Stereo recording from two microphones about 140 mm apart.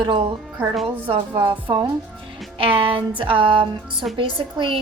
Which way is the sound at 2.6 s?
40° right (ahead or behind).